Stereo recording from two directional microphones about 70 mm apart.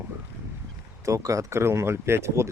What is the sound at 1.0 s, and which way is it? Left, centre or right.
Speech, right.